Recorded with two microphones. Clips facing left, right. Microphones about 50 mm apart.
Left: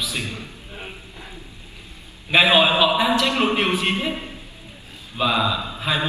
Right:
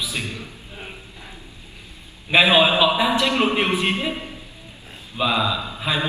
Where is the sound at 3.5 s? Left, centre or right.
Centre.